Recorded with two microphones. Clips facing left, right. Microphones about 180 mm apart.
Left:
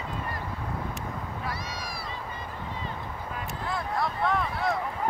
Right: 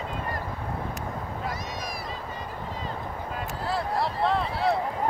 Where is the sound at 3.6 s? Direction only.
35° right (ahead or behind).